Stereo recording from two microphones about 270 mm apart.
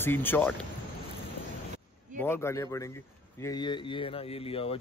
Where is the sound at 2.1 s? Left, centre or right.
Centre.